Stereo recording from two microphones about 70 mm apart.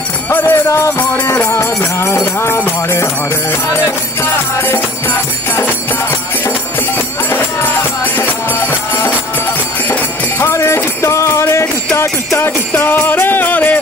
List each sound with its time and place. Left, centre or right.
0.3 s jingle bell: left
1.4 s music: left
8.2 s music: left
10.4 s music: left